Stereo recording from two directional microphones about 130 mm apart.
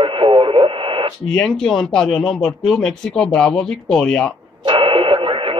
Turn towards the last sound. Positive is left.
turn(degrees=-45)  # may be behind; listen again after turning